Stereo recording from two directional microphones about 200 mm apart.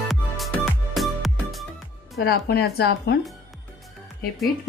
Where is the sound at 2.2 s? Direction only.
50° left (ahead or behind).